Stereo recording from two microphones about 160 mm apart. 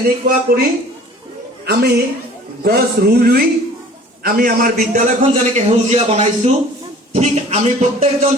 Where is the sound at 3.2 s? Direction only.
75° right (ahead or behind).